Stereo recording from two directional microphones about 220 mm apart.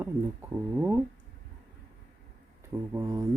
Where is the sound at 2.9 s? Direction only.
15° right (ahead or behind).